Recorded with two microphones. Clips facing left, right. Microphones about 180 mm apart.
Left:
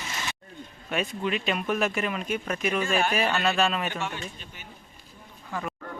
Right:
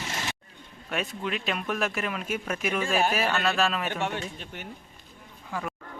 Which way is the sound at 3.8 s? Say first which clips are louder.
Right 2 dB; 60° right (ahead or behind).